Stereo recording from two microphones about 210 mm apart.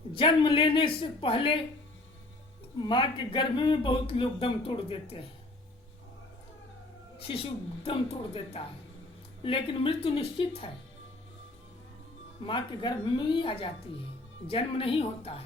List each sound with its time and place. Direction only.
0.1 s speech: 25° left (ahead or behind)
2.8 s speech: 20° left (ahead or behind)
7.2 s a woman's voice: 25° left (ahead or behind)
12.5 s speech: 25° left (ahead or behind)